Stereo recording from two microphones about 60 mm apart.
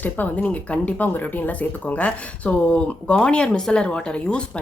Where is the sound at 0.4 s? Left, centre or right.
Left.